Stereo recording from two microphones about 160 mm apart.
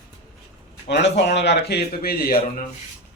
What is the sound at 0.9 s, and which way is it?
A man's voice, 90° left.